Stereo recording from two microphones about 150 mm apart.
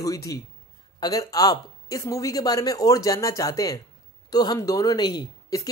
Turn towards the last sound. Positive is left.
turn(degrees=25)  # may be behind; listen again after turning